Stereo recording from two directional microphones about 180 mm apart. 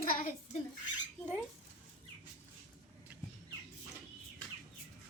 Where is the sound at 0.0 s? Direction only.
50° left (ahead or behind).